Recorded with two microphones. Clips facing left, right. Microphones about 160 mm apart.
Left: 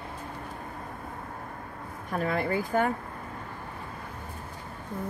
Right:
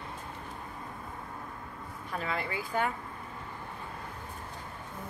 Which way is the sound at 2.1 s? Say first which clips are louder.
Left 7 dB; 50° left (ahead or behind).